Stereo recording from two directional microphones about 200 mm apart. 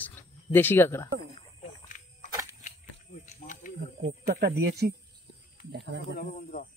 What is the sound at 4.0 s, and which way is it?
Speech, 50° right (ahead or behind).